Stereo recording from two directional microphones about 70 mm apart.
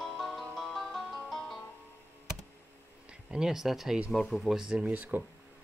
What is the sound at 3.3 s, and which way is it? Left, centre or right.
Speech, centre.